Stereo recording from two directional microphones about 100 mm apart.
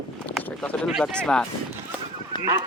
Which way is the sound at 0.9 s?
Centre (ahead or behind).